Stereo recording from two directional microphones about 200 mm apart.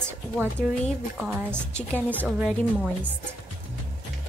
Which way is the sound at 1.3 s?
10° right (ahead or behind).